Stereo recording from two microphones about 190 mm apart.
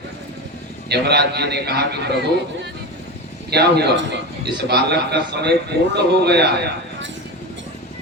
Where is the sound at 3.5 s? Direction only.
60° right (ahead or behind).